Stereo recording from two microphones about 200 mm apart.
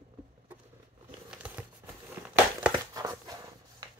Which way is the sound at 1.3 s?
5° right (ahead or behind).